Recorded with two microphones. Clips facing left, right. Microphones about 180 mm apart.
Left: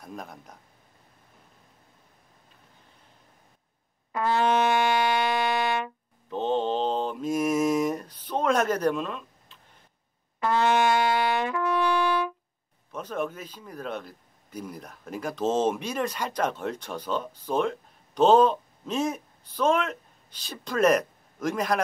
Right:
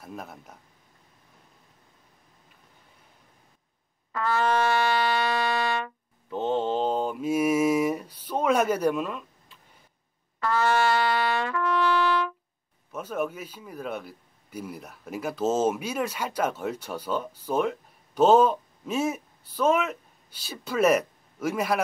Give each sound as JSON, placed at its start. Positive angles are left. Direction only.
{"t": 0.0, "sound": "speech", "side_deg": -5}
{"t": 4.1, "sound": "music", "side_deg": 20}
{"t": 6.3, "sound": "mantra", "side_deg": -10}
{"t": 10.4, "sound": "trumpet", "side_deg": 20}
{"t": 12.9, "sound": "a man's voice", "side_deg": -5}